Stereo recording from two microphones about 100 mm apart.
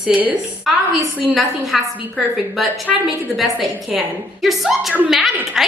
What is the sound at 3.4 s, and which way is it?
Speech, centre (ahead or behind).